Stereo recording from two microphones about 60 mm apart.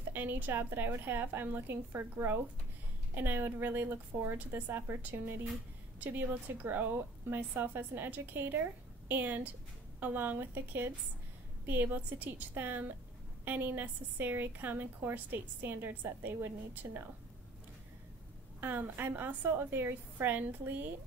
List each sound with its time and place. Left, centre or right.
0.1 s a woman's voice: right
18.6 s a woman's voice: right